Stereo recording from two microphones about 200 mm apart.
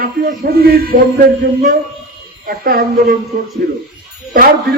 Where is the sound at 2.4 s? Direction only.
50° right (ahead or behind).